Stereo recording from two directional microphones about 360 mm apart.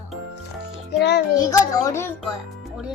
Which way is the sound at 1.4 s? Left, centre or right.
Centre.